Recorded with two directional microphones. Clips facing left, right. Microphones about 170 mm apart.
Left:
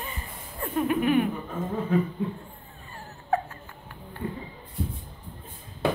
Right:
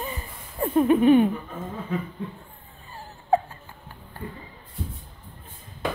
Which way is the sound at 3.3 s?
30° right (ahead or behind).